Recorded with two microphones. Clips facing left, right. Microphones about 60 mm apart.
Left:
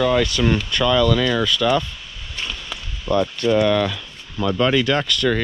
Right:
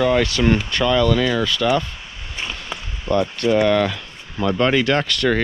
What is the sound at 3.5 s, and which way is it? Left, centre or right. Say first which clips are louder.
Speech: right 1 dB; right.